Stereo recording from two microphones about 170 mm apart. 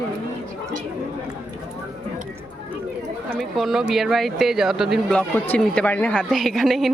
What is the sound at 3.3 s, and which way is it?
Speech, centre (ahead or behind).